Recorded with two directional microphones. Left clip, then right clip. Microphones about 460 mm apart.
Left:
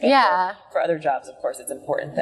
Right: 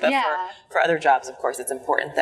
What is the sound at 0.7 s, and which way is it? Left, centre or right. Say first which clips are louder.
Speech: right 4 dB; centre.